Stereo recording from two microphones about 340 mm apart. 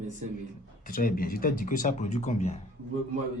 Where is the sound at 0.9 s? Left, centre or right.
Left.